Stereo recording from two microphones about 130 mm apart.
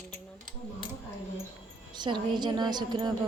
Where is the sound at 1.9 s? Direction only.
35° right (ahead or behind).